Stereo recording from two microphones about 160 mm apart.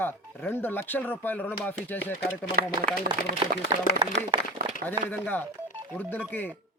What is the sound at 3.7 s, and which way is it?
Speech, 25° right (ahead or behind).